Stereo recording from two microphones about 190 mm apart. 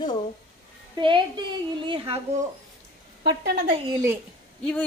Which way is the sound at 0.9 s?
25° right (ahead or behind).